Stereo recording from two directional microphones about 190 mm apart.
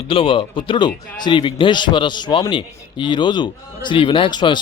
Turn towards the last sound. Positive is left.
turn(degrees=25)  # may be behind; listen again after turning